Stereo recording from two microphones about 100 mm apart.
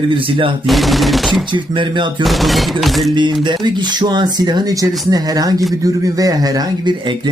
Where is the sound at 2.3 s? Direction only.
Centre (ahead or behind).